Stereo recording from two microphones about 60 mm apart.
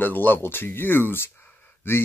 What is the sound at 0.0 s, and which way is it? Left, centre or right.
Speech, left.